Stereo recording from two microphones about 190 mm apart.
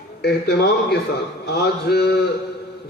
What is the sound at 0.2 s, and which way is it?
A man's voice, 60° left (ahead or behind).